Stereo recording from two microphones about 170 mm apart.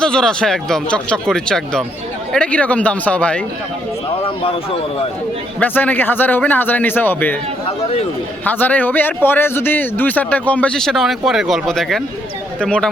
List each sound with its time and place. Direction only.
0.0 s a man's voice: 5° left (ahead or behind)
4.2 s speech: 35° left (ahead or behind)
5.5 s a man's voice: 10° left (ahead or behind)
8.4 s a man's voice: 10° left (ahead or behind)